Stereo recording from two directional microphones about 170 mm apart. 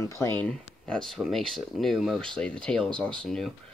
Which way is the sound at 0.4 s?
5° left (ahead or behind).